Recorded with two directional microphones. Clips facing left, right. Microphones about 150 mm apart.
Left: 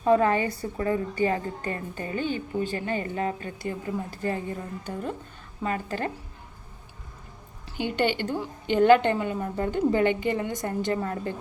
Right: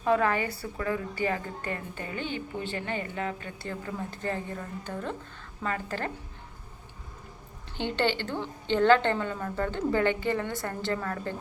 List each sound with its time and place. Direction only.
0.0 s a woman's voice: 35° left (ahead or behind)
3.6 s a woman's voice: 15° left (ahead or behind)
7.8 s a woman's voice: 15° left (ahead or behind)